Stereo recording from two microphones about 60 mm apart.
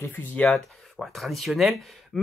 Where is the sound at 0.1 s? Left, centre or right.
Left.